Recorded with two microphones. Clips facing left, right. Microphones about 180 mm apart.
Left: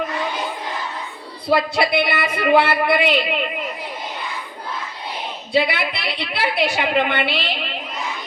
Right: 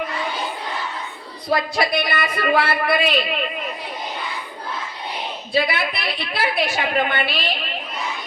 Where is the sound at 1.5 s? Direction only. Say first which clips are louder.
Left 3 dB; 25° left (ahead or behind).